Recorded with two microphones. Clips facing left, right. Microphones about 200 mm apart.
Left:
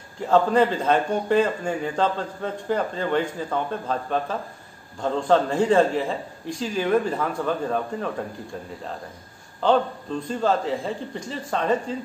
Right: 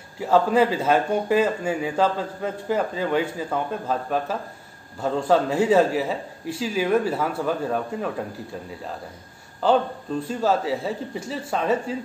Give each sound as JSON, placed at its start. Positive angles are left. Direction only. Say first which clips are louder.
{"t": 0.2, "sound": "a man's voice", "louder": "even", "side_deg": -5}
{"t": 9.6, "sound": "a man's voice", "louder": "even", "side_deg": -5}